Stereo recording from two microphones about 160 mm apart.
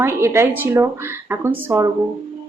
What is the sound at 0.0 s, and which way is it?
A woman's voice, 15° right (ahead or behind).